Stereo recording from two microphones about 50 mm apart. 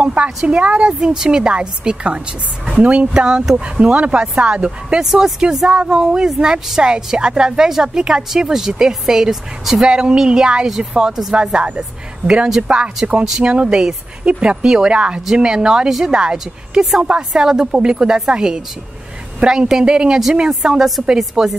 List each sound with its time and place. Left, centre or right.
0.0 s a woman's voice: right; by 12.6 s centre
12.6 s a woman's voice: right; by 21.5 s centre